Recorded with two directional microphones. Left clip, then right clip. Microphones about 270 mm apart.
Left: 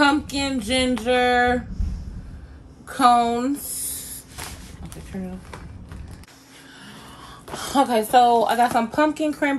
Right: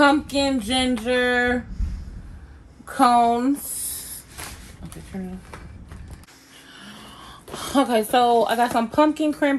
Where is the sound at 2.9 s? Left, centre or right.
Right.